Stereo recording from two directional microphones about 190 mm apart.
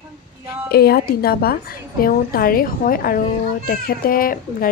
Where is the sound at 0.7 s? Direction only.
55° left (ahead or behind).